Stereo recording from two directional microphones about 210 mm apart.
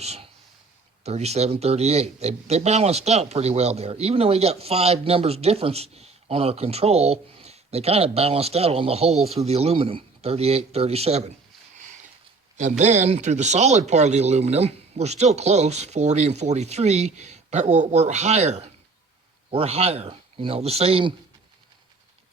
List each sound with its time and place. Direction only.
0.0 s speech: 30° right (ahead or behind)
9.1 s speech: centre (ahead or behind)
9.4 s speech: 30° right (ahead or behind)
12.5 s speech: 35° right (ahead or behind)